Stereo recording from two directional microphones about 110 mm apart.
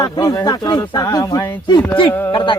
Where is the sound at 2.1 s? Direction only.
20° left (ahead or behind).